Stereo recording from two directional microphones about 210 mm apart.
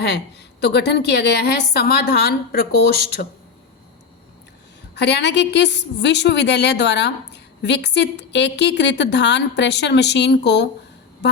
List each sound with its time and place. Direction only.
0.6 s a woman's voice: 55° left (ahead or behind)
4.9 s a woman's voice: 55° left (ahead or behind)